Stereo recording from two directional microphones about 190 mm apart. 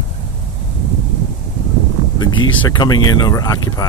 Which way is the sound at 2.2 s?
25° left (ahead or behind).